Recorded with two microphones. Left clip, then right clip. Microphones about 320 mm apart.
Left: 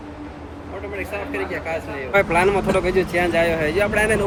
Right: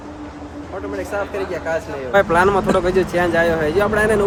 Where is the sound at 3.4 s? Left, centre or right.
Right.